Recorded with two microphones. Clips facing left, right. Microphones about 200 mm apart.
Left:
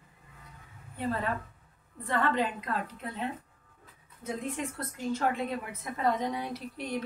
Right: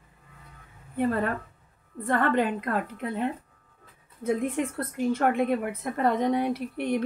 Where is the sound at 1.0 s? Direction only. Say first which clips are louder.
Right 6 dB; 55° right (ahead or behind).